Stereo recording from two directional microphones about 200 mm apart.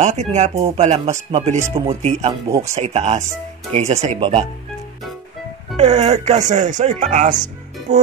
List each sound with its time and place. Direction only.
0.0 s speech: 35° right (ahead or behind)
1.6 s speech: 15° right (ahead or behind)
2.7 s speech: 35° right (ahead or behind)
5.8 s speech: 35° right (ahead or behind)